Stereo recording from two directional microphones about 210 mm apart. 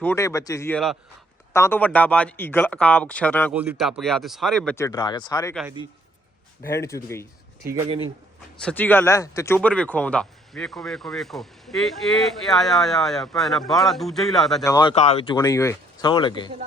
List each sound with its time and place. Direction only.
0.0 s a man's voice: 10° left (ahead or behind)
3.5 s speech: 5° right (ahead or behind); by 5.5 s 15° left (ahead or behind)
6.6 s a man's voice: 15° left (ahead or behind)
7.6 s speech: 15° right (ahead or behind)
8.6 s speech: 10° left (ahead or behind)
14.6 s a man's voice: 15° left (ahead or behind)
14.9 s speech: 30° left (ahead or behind)
15.3 s speech: 15° left (ahead or behind)